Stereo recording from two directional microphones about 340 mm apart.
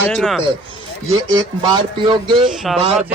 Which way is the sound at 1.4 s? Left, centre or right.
Centre.